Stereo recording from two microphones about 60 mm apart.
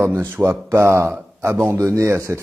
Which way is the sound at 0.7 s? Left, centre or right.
Right.